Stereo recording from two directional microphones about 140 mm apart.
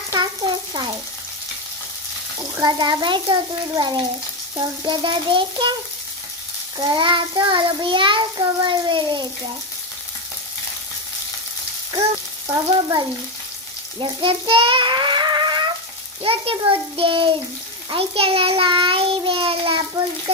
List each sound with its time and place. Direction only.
0.1 s speech: 30° right (ahead or behind)
2.6 s child singing: 30° right (ahead or behind)
6.9 s child singing: 35° right (ahead or behind)
12.5 s frying: 30° right (ahead or behind)
14.0 s a child's voice: 40° right (ahead or behind)
16.2 s child singing: 40° right (ahead or behind)